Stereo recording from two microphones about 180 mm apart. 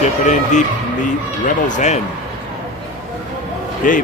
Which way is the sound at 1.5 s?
45° left (ahead or behind).